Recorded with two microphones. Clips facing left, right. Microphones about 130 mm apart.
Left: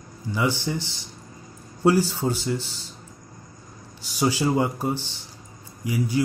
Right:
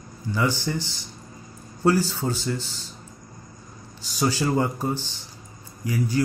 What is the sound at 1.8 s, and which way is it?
Speech, 15° left (ahead or behind).